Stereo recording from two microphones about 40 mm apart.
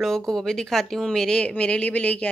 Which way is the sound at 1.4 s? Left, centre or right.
Left.